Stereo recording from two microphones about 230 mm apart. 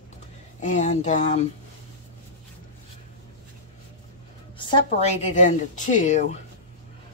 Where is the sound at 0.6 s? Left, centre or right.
Left.